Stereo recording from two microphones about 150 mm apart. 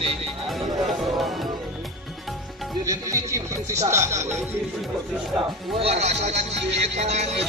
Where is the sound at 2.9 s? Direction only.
20° right (ahead or behind).